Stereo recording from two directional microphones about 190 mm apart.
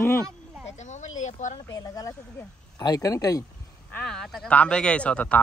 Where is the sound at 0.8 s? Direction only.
40° left (ahead or behind).